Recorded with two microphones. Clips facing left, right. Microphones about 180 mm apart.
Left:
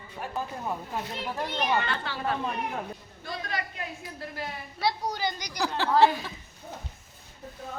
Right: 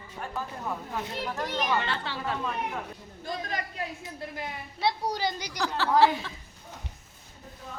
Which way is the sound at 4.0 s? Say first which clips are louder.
Even; 20° right (ahead or behind).